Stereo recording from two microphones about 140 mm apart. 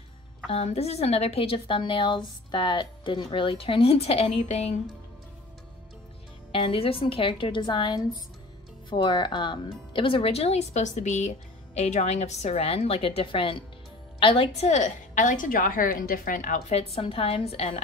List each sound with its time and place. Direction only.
0.5 s a woman's voice: 45° left (ahead or behind)
6.5 s a woman's voice: 40° left (ahead or behind); by 16.6 s 75° left (ahead or behind)
16.6 s speech: 45° left (ahead or behind)